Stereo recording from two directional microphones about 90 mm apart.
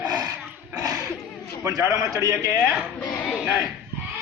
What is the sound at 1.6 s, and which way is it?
Speech, 35° right (ahead or behind).